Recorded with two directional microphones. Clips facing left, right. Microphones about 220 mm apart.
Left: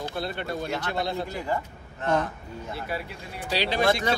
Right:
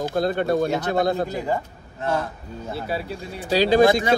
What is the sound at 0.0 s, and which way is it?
Speech, 45° right (ahead or behind).